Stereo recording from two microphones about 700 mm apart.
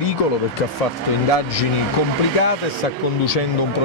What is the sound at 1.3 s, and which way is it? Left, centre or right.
Speech, left.